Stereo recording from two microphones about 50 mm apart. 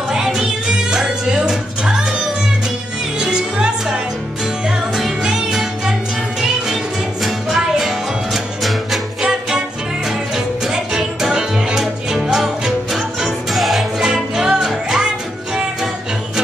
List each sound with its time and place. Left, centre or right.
0.1 s music: centre
3.2 s music: centre
7.2 s music: centre